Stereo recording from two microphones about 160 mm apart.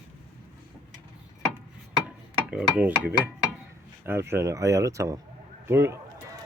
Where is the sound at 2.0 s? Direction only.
5° right (ahead or behind).